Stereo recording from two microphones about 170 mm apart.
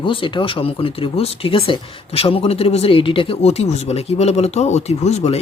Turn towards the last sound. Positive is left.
turn(degrees=40)  # may be behind; listen again after turning